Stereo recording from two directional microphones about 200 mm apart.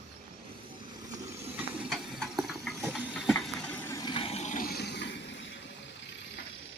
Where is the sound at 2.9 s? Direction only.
5° right (ahead or behind); by 5.0 s 55° left (ahead or behind).